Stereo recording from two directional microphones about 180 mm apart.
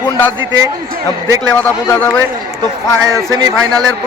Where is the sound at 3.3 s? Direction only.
20° right (ahead or behind).